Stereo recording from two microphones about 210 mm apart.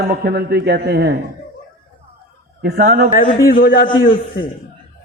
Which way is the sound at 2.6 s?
40° right (ahead or behind).